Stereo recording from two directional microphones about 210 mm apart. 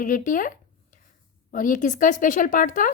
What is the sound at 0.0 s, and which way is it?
A woman's voice, 40° left (ahead or behind).